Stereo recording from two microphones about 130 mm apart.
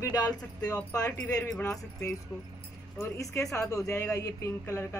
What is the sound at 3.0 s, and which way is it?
Speech, 25° left (ahead or behind).